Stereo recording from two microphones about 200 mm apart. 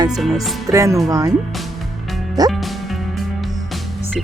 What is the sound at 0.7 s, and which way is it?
Speech, 15° right (ahead or behind).